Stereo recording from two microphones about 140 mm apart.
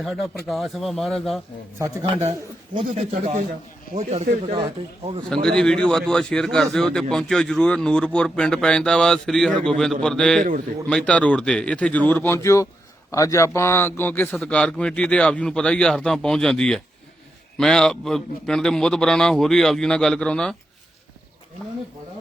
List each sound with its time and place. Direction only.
0.0 s a man's voice: centre (ahead or behind)
2.7 s speech: 50° right (ahead or behind)
4.5 s speech: 40° right (ahead or behind)
5.3 s a man's voice: 5° left (ahead or behind)